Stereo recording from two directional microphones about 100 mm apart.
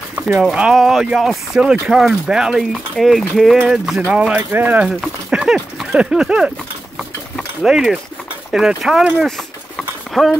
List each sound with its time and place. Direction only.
0.4 s speech: 10° right (ahead or behind)
4.4 s speech: 20° right (ahead or behind)
5.3 s speech: 5° right (ahead or behind)
9.8 s clip-clop: centre (ahead or behind)